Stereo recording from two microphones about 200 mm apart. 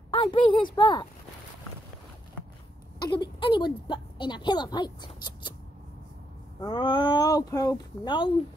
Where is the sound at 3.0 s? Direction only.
20° left (ahead or behind).